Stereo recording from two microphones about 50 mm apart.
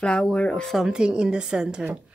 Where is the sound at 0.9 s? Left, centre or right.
Centre.